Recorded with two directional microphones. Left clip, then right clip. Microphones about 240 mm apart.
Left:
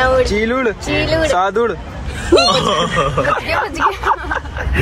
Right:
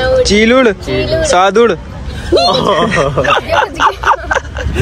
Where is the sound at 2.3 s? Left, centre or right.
Left.